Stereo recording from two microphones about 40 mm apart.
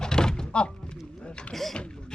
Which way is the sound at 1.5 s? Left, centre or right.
Centre.